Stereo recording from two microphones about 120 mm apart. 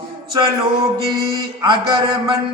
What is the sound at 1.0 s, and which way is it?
Mantra, 40° right (ahead or behind).